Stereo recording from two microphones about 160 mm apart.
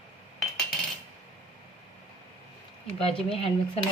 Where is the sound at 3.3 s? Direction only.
40° left (ahead or behind).